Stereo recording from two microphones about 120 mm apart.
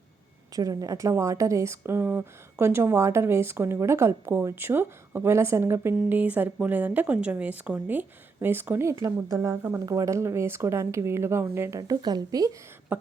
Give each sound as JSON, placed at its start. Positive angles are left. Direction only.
{"t": 0.5, "sound": "speech", "side_deg": -30}
{"t": 11.8, "sound": "a woman's voice", "side_deg": -35}